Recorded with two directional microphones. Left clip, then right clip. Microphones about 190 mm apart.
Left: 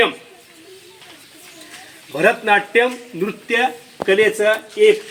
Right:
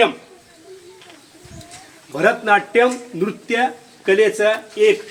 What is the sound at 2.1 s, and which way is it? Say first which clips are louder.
A man's voice: even; 10° right (ahead or behind).